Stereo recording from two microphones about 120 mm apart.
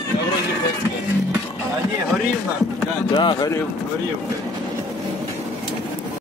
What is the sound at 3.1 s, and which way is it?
Run, 40° left (ahead or behind).